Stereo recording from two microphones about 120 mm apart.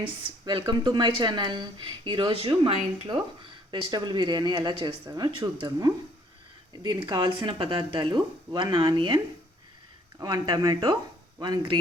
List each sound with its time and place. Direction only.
0.0 s speech: 40° right (ahead or behind)